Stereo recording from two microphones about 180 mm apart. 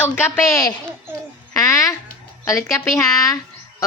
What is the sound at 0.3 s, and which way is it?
Speech, 15° left (ahead or behind).